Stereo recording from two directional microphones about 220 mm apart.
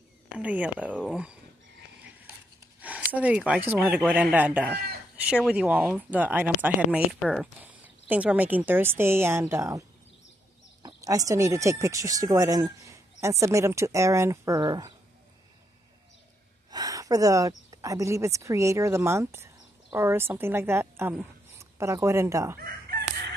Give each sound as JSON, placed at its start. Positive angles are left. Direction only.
{"t": 0.4, "sound": "speech", "side_deg": -5}
{"t": 2.8, "sound": "speech", "side_deg": -5}
{"t": 16.7, "sound": "speech", "side_deg": -15}
{"t": 22.6, "sound": "chicken", "side_deg": -45}